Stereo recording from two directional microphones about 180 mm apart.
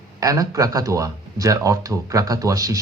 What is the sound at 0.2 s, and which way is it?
A man's voice, 20° right (ahead or behind).